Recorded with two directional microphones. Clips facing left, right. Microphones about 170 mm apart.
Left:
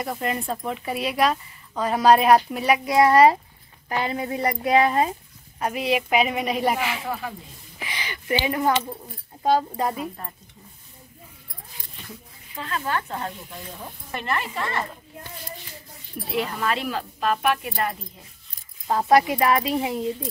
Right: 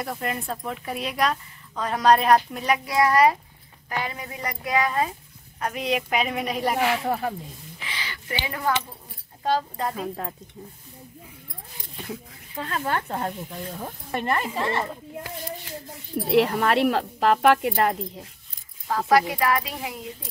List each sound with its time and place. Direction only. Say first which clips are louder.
0.0 s speech: left 2 dB; centre (ahead or behind)
2.9 s speech: left 4 dB; 25° left (ahead or behind)
5.6 s speech: left 2 dB; 5° left (ahead or behind)
7.1 s speech: right 4 dB; 45° right (ahead or behind)
7.8 s a sound: left 3 dB; 15° left (ahead or behind)
9.4 s speech: left 4 dB; 10° left (ahead or behind)
12.8 s speech: right 2 dB; 40° right (ahead or behind)
14.6 s speech: right 2 dB; 25° right (ahead or behind)
16.3 s speech: right 6 dB; 70° right (ahead or behind)
18.9 s speech: left 2 dB; 25° left (ahead or behind)